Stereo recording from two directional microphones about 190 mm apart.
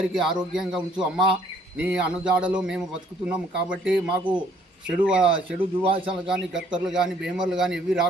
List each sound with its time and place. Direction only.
0.1 s speech: centre (ahead or behind)
5.8 s a man's voice: 30° right (ahead or behind)
6.2 s speech: 5° right (ahead or behind)